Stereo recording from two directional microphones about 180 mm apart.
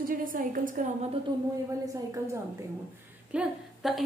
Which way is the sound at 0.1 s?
50° right (ahead or behind).